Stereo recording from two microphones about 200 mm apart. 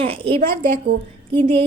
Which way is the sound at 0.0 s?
25° right (ahead or behind).